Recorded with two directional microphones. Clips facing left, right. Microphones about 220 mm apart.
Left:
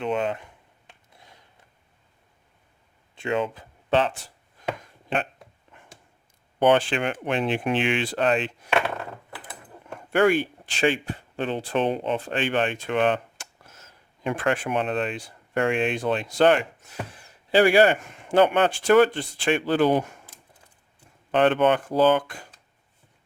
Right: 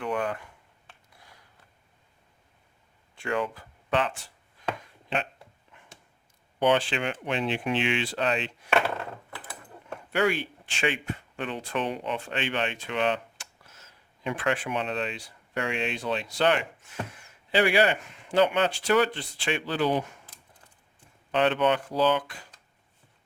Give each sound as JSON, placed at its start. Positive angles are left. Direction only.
{"t": 0.0, "sound": "a sound", "side_deg": 25}
{"t": 3.2, "sound": "speech", "side_deg": 20}
{"t": 5.0, "sound": "a sound", "side_deg": 50}
{"t": 6.6, "sound": "speech", "side_deg": 55}
{"t": 10.1, "sound": "speech", "side_deg": 50}
{"t": 10.7, "sound": "speech", "side_deg": 35}
{"t": 21.3, "sound": "speech", "side_deg": 50}